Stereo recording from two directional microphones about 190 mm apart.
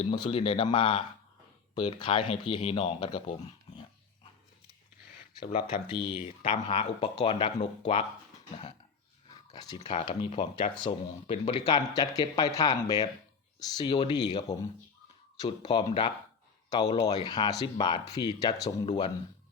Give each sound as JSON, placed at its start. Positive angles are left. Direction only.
{"t": 0.0, "sound": "speech", "side_deg": 30}
{"t": 5.5, "sound": "speech", "side_deg": 45}
{"t": 5.9, "sound": "speech", "side_deg": 30}
{"t": 9.6, "sound": "speech", "side_deg": 20}